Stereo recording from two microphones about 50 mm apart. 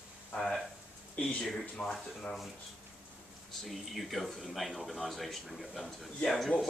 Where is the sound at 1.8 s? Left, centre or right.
Centre.